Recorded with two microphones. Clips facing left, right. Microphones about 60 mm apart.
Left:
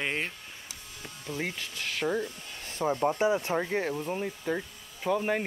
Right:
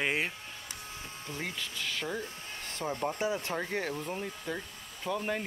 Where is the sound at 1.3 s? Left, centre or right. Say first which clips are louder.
Left 6 dB; right.